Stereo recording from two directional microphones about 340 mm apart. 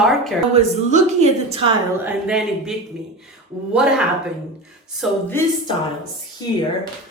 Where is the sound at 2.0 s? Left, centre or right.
Centre.